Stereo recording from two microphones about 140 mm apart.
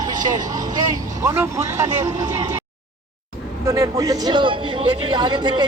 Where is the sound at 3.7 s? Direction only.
25° right (ahead or behind).